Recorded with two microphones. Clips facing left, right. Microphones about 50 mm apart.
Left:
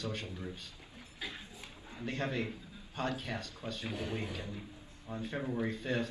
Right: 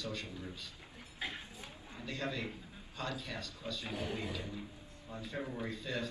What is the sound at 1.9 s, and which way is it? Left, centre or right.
A man's voice, left.